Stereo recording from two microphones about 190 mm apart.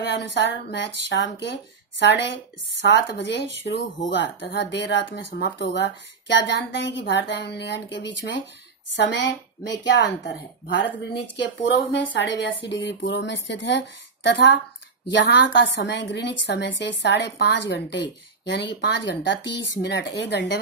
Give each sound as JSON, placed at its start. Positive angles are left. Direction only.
{"t": 0.0, "sound": "a woman's voice", "side_deg": 65}
{"t": 11.9, "sound": "a woman's voice", "side_deg": 70}